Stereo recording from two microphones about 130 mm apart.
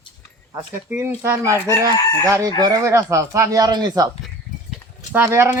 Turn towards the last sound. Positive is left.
turn(degrees=-20)  # may be behind; listen again after turning